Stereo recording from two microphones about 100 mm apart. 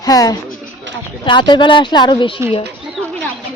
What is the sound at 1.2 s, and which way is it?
A woman's voice, 50° left (ahead or behind).